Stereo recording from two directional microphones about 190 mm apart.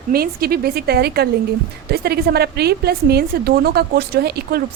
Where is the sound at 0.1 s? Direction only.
55° right (ahead or behind).